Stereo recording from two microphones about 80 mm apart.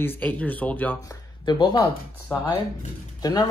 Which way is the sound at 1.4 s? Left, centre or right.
Left.